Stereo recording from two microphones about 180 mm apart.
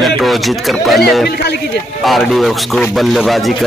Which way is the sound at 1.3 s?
65° left (ahead or behind).